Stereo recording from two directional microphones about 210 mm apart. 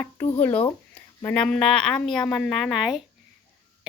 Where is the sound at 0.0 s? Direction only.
10° left (ahead or behind).